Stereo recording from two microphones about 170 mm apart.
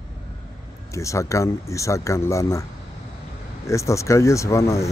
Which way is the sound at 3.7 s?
15° left (ahead or behind).